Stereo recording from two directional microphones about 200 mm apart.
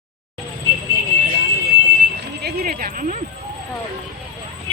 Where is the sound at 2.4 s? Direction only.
50° right (ahead or behind).